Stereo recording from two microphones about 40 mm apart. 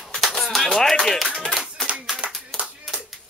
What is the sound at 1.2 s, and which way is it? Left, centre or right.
Clapping, centre.